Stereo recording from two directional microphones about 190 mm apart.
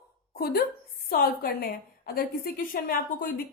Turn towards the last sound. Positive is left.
turn(degrees=50)  # may be behind; listen again after turning